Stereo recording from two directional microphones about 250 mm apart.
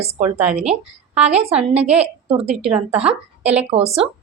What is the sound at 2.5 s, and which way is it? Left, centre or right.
A woman's voice, centre.